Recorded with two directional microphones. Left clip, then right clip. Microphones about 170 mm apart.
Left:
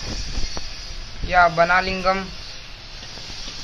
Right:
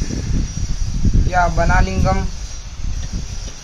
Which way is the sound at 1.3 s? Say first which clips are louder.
Left 2 dB; 15° right (ahead or behind).